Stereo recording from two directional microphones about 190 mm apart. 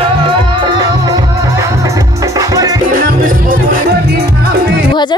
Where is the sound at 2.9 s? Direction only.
50° right (ahead or behind).